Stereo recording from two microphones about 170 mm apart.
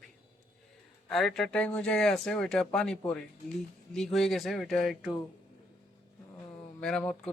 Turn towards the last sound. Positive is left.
turn(degrees=5)  # may be behind; listen again after turning